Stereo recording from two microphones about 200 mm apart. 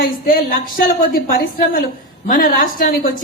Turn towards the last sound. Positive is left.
turn(degrees=45)  # may be behind; listen again after turning